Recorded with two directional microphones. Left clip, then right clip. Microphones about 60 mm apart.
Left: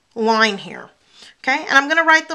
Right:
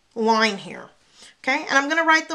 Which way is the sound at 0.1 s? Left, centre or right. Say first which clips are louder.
Left 3 dB; left.